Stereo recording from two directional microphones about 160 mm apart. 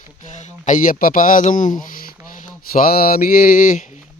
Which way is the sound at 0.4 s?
50° left (ahead or behind).